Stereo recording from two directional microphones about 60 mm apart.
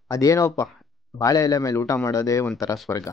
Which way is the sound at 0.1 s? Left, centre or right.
Left.